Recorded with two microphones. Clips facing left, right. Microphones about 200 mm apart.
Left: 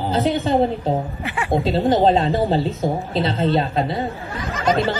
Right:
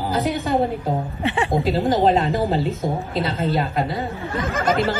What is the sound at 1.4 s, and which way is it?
A woman's voice, 30° left (ahead or behind).